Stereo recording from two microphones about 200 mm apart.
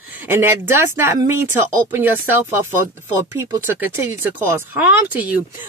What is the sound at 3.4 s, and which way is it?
Speech, 10° right (ahead or behind).